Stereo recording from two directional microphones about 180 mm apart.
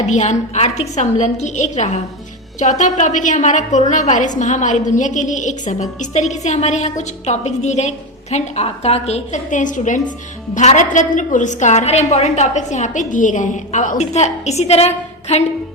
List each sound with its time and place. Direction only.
0.0 s a woman's voice: 40° left (ahead or behind)